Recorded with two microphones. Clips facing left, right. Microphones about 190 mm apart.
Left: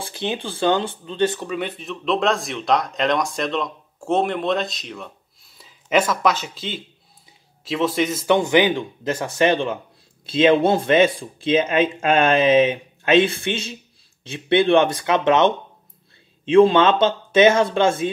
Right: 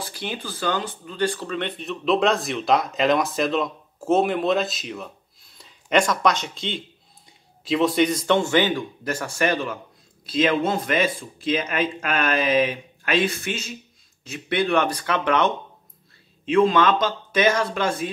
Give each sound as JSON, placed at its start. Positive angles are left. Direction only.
{"t": 0.0, "sound": "speech", "side_deg": 25}
{"t": 8.4, "sound": "speech", "side_deg": 15}